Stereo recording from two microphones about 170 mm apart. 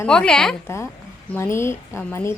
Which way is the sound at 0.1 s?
5° left (ahead or behind).